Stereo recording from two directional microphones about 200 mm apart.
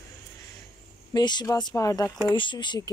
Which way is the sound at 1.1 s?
20° left (ahead or behind).